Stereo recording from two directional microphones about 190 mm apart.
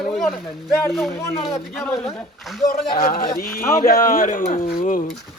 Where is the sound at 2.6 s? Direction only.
50° left (ahead or behind).